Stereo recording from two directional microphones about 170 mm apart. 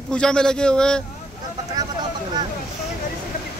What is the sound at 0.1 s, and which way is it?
Speech, 5° left (ahead or behind).